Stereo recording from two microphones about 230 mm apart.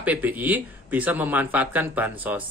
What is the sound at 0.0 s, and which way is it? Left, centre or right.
Speech, centre.